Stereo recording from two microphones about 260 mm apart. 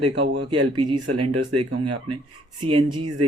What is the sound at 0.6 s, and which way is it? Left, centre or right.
Speech, right.